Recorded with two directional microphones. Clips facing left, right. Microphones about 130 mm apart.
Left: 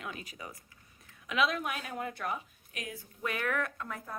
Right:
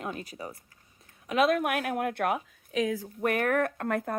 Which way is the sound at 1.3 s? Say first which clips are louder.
Right 7 dB; 50° right (ahead or behind).